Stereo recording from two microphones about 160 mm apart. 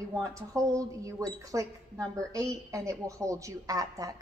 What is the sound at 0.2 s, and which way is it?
A woman's voice, 20° right (ahead or behind).